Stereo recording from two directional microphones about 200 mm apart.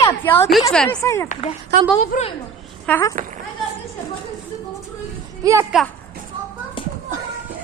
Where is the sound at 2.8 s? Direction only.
10° left (ahead or behind).